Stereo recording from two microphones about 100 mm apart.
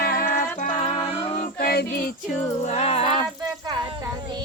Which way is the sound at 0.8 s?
90° left.